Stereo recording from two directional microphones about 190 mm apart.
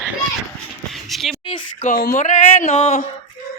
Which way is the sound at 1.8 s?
45° left (ahead or behind).